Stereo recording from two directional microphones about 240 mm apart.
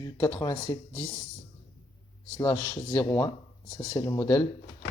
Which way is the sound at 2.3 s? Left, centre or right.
Centre.